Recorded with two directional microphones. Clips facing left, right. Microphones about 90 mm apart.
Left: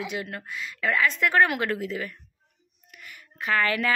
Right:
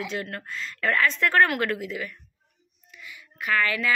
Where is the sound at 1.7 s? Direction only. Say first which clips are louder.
Left 1 dB; 35° left (ahead or behind).